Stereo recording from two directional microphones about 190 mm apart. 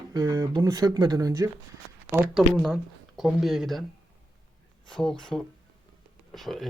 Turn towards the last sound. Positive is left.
turn(degrees=0)  # may be behind; listen again after turning